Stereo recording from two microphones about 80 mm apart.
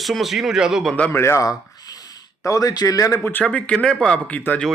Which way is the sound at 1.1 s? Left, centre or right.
Left.